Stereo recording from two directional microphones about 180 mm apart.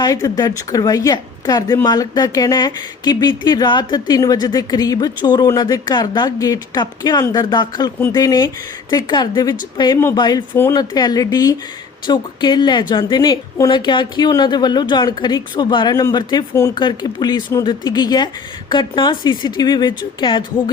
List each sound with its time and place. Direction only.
0.0 s a woman's voice: 20° left (ahead or behind)